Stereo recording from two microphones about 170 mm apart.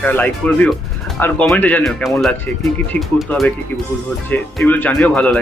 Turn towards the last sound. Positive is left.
turn(degrees=5)  # may be behind; listen again after turning